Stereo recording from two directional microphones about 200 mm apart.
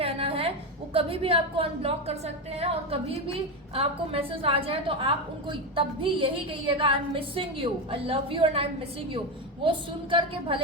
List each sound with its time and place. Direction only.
0.0 s a sound: 30° right (ahead or behind)
0.9 s a woman's voice: 30° right (ahead or behind)
4.3 s a woman's voice: 30° right (ahead or behind)
9.6 s a woman's voice: 25° right (ahead or behind)